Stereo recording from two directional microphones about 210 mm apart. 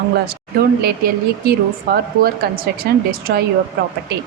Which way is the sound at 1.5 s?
45° right (ahead or behind).